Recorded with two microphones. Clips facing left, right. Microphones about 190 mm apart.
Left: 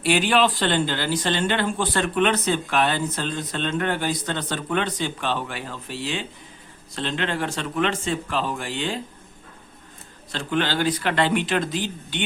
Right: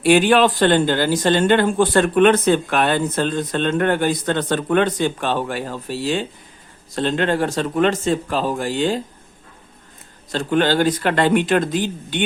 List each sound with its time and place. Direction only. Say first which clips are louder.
0.0 s a man's voice: right 6 dB; 50° right (ahead or behind)
10.3 s speech: right 7 dB; 45° right (ahead or behind)